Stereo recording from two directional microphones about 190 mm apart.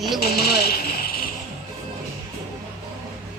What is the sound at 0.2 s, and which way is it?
Speech, 55° left (ahead or behind).